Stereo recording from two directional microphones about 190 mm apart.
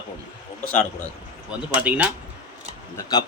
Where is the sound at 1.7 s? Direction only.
5° right (ahead or behind).